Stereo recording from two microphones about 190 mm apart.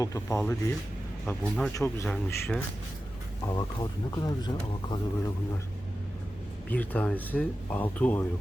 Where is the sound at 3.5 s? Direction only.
20° left (ahead or behind).